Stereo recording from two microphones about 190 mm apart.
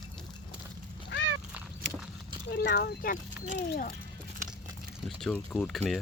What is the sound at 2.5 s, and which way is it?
Speech, 60° left (ahead or behind).